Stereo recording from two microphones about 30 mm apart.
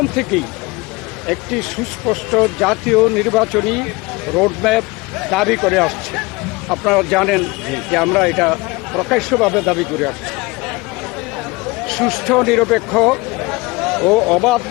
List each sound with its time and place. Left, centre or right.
0.0 s speech: centre
11.9 s speech: centre